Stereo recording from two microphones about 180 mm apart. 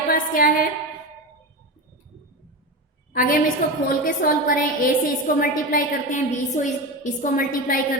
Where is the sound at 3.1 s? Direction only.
50° left (ahead or behind).